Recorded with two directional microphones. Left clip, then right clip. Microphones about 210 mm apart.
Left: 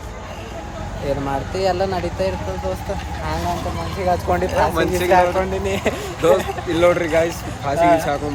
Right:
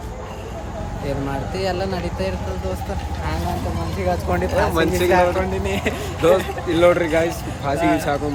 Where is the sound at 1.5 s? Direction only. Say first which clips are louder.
Left 5 dB; 5° right (ahead or behind).